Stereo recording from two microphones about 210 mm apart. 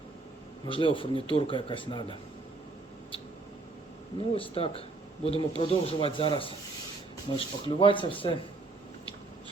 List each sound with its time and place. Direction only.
0.6 s speech: 25° left (ahead or behind)
4.4 s speech: 25° left (ahead or behind)